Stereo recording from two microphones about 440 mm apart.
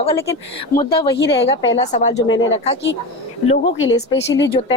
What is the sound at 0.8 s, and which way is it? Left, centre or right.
A woman's voice, left.